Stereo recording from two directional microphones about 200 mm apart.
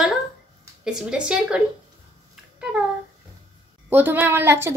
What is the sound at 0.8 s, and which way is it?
Speech, 5° right (ahead or behind).